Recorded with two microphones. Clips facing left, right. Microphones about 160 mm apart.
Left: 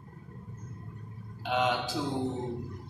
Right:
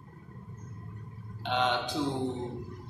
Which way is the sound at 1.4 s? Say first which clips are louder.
Left 1 dB; 5° left (ahead or behind).